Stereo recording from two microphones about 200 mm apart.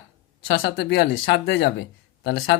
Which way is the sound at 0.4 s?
55° left (ahead or behind).